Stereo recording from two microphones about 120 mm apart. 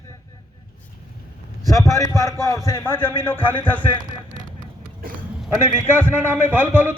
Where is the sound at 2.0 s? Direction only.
30° left (ahead or behind).